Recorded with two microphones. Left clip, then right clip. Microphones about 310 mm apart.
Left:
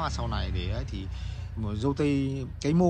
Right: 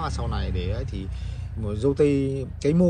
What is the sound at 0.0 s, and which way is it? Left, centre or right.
Speech, centre.